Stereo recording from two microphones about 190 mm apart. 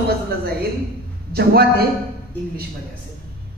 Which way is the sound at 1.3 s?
55° right (ahead or behind).